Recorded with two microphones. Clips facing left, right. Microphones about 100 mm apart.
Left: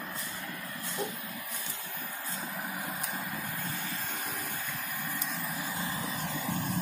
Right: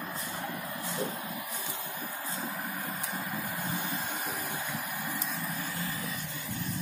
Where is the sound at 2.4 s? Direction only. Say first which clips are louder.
Even; centre (ahead or behind).